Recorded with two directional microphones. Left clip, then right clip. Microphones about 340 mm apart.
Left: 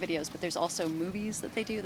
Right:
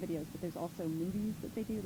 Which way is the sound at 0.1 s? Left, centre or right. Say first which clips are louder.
Left 8 dB; centre.